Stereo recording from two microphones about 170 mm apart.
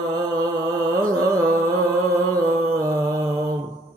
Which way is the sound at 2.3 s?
20° right (ahead or behind).